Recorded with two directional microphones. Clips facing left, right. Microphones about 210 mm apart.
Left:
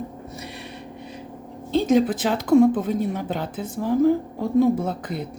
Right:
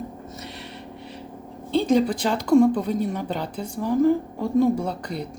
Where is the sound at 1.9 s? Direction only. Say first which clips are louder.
Left 2 dB; 5° left (ahead or behind).